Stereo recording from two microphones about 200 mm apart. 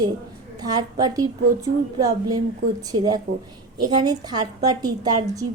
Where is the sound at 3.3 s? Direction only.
45° right (ahead or behind).